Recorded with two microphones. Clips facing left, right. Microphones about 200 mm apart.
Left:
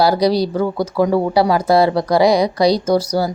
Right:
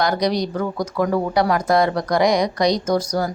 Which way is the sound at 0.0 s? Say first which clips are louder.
Left 5 dB; 30° left (ahead or behind).